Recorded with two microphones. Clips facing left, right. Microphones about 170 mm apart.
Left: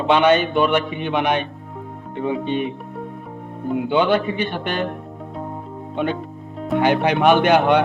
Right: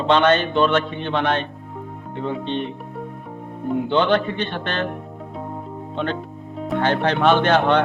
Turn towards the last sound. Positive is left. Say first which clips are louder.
# left 2 dB
turn(degrees=10)  # may be behind; listen again after turning